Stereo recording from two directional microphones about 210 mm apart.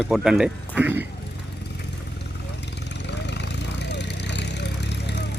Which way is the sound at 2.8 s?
55° left (ahead or behind).